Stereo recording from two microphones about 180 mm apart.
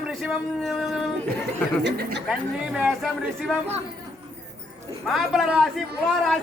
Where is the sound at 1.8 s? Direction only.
70° right (ahead or behind).